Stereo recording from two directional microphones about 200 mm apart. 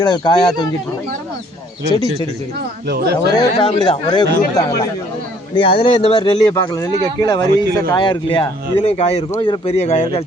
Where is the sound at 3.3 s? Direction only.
20° left (ahead or behind).